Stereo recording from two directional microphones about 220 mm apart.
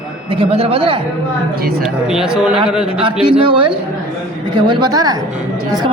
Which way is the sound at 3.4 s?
25° right (ahead or behind).